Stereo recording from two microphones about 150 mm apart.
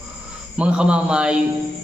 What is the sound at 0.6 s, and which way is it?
Speech, 5° right (ahead or behind).